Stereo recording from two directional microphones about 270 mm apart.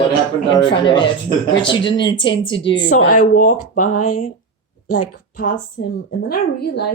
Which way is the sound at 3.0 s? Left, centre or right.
Left.